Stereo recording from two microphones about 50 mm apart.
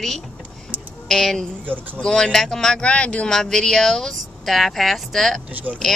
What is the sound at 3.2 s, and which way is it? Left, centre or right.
Speech, centre.